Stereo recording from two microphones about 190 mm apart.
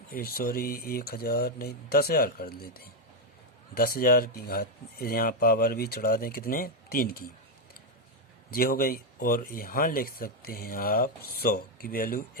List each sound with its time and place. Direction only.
0.1 s speech: 50° left (ahead or behind)
8.4 s speech: 50° left (ahead or behind)